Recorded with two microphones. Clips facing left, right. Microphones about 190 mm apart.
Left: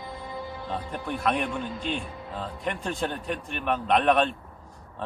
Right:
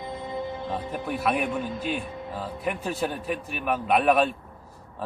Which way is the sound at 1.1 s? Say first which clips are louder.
Right 1 dB; 5° right (ahead or behind).